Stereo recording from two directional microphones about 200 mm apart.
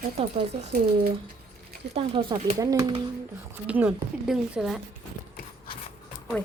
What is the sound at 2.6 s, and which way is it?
Speech, 20° right (ahead or behind).